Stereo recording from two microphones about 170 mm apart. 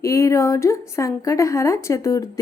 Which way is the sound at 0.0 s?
20° left (ahead or behind).